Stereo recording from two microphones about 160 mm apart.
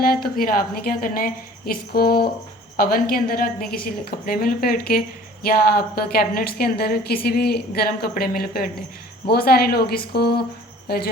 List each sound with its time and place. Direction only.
0.0 s a woman's voice: 65° left (ahead or behind)